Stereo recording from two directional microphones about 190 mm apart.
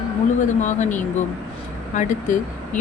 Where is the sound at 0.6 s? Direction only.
40° left (ahead or behind).